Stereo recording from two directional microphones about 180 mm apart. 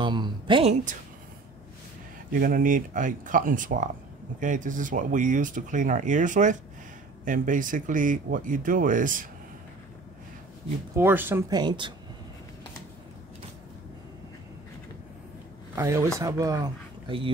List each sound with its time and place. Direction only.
0.0 s speech: 25° right (ahead or behind)
2.4 s speech: 50° right (ahead or behind)
11.0 s speech: 10° right (ahead or behind)
15.7 s speech: 15° right (ahead or behind)